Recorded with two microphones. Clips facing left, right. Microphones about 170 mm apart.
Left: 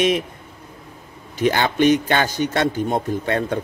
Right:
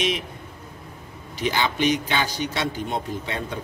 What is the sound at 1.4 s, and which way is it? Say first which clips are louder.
Speech: left 6 dB; 50° left (ahead or behind).